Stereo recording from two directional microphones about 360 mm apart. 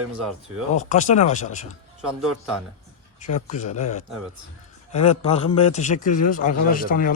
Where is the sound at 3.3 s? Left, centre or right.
Centre.